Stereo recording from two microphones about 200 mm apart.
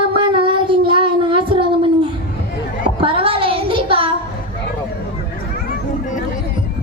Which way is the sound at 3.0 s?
25° right (ahead or behind).